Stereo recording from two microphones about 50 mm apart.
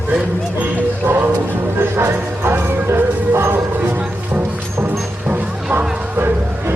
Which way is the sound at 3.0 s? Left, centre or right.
Right.